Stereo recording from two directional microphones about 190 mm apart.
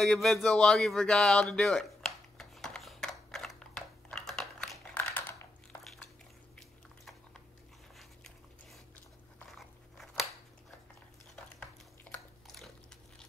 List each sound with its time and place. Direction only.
0.0 s a sound: centre (ahead or behind)
9.6 s crunch: centre (ahead or behind)
12.5 s biting: centre (ahead or behind)